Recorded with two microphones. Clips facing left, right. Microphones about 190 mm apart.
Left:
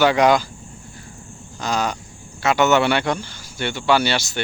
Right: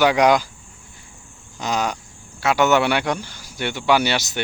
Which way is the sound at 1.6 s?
15° right (ahead or behind).